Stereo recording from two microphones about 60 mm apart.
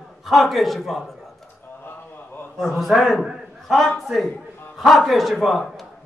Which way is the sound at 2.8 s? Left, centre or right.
Centre.